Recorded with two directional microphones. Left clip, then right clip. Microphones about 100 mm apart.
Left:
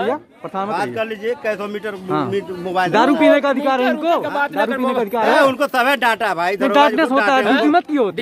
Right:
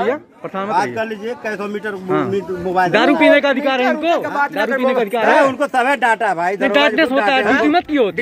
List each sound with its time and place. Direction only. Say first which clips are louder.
0.7 s speech: right 4 dB; 10° left (ahead or behind)
2.3 s speech: right 2 dB; 20° left (ahead or behind); by 4.3 s 40° left (ahead or behind)
4.7 s speech: right 2 dB; 25° left (ahead or behind)
5.4 s speech: even; 15° left (ahead or behind)
6.6 s speech: left 1 dB; 45° left (ahead or behind)
7.7 s speech: right 1 dB; 30° left (ahead or behind)